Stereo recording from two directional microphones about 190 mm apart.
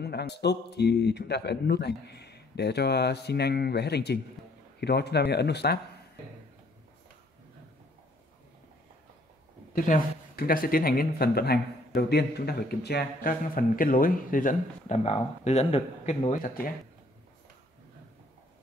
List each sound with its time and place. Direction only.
0.0 s a man's voice: 60° left (ahead or behind)
9.8 s speech: 45° left (ahead or behind)
16.4 s speech: 50° left (ahead or behind)